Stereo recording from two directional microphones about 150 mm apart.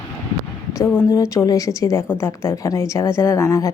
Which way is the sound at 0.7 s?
15° left (ahead or behind).